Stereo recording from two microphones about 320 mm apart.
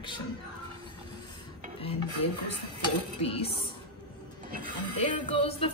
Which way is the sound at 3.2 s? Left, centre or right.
Centre.